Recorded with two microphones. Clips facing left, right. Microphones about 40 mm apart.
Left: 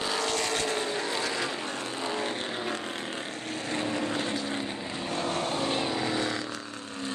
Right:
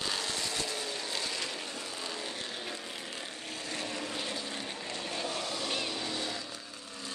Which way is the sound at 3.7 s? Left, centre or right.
Left.